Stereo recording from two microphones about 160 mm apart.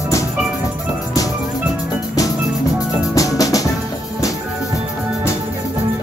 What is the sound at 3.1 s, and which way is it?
Music, 20° left (ahead or behind).